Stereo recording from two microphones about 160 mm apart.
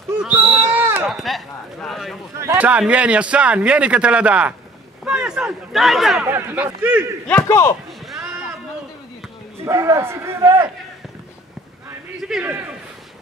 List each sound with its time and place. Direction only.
0.2 s a sound: 10° right (ahead or behind)
1.0 s speech: centre (ahead or behind)
2.3 s speech: 15° right (ahead or behind)
6.2 s speech: 15° right (ahead or behind)
7.2 s speech: 15° left (ahead or behind)
9.7 s speech: 15° right (ahead or behind)
12.2 s a man's voice: 5° right (ahead or behind)